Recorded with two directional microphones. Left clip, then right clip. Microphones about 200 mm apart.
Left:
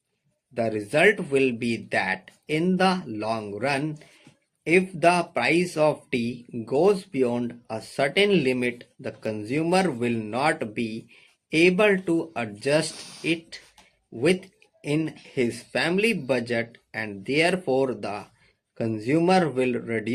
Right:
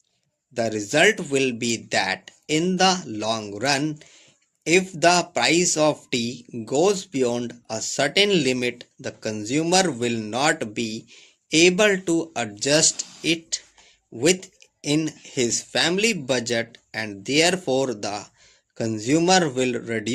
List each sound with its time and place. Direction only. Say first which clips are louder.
0.5 s speech: right 2 dB; 35° right (ahead or behind)